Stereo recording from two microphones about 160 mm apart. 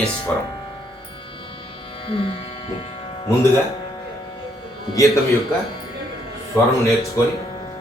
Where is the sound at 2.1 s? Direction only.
35° left (ahead or behind).